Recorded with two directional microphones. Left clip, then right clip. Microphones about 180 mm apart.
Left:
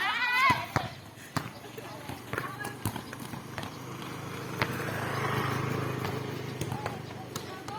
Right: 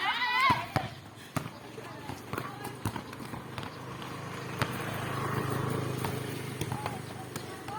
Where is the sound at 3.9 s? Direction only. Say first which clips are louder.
Even; 75° left (ahead or behind).